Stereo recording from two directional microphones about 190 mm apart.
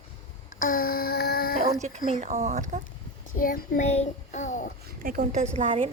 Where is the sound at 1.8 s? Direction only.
35° right (ahead or behind).